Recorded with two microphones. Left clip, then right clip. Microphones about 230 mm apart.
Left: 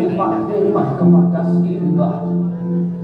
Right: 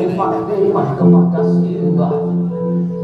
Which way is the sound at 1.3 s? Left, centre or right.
Right.